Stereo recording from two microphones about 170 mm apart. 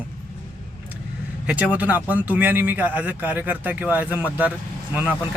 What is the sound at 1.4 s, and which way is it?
Speech, 5° right (ahead or behind).